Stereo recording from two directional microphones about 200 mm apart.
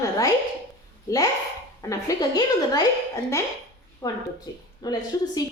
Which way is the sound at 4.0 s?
20° left (ahead or behind).